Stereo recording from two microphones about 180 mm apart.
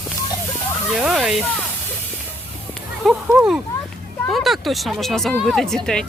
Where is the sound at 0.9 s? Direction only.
5° right (ahead or behind).